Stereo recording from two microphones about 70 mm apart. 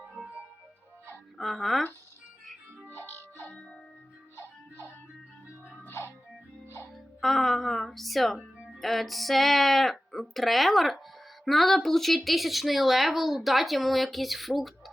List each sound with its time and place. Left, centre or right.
1.4 s speech: centre
2.9 s music: left
5.5 s music: right
5.9 s music: left
6.9 s speech: centre